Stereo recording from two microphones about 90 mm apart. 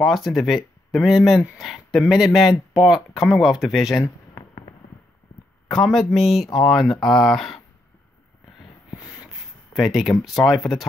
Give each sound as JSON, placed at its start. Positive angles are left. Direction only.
{"t": 0.0, "sound": "speech", "side_deg": 0}
{"t": 5.7, "sound": "speech", "side_deg": 0}
{"t": 8.9, "sound": "snort", "side_deg": 35}
{"t": 9.8, "sound": "speech", "side_deg": 0}